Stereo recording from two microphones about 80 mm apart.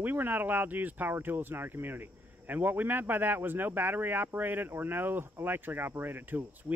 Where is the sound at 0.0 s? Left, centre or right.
Right.